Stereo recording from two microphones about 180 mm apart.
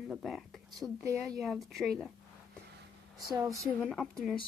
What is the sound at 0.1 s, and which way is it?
Speech, centre (ahead or behind).